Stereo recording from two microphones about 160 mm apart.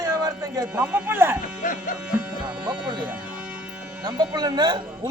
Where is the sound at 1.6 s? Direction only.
55° left (ahead or behind).